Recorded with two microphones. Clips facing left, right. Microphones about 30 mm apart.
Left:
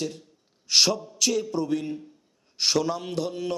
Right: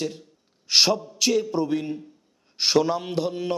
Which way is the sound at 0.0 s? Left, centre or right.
Centre.